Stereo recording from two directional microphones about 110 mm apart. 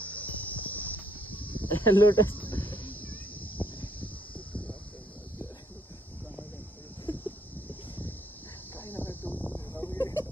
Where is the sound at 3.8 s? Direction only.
15° left (ahead or behind).